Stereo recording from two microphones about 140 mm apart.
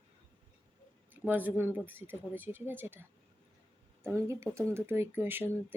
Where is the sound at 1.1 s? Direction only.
15° right (ahead or behind).